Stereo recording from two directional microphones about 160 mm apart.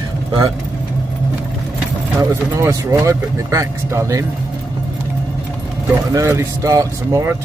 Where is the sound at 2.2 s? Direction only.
20° right (ahead or behind).